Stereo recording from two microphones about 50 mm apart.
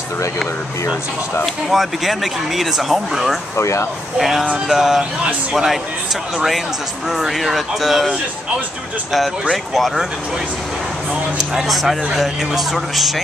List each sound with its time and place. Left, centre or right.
1.4 s speech: centre
3.5 s speech: left
4.2 s speech: centre
7.1 s speech: centre
9.1 s speech: centre
11.3 s speech: centre